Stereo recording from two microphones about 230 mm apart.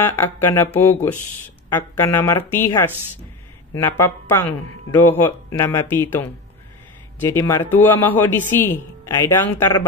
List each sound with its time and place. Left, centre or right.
0.0 s speech: centre